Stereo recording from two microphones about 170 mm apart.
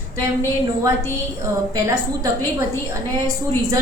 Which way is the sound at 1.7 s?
20° right (ahead or behind).